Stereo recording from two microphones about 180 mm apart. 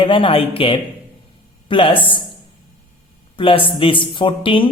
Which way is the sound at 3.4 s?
30° left (ahead or behind).